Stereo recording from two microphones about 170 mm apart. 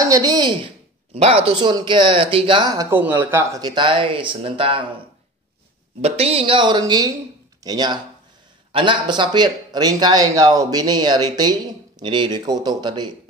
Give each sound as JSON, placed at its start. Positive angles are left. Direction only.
{"t": 0.0, "sound": "a woman's voice", "side_deg": -20}
{"t": 1.1, "sound": "speech", "side_deg": -40}
{"t": 1.5, "sound": "speech", "side_deg": -25}
{"t": 5.9, "sound": "speech", "side_deg": -35}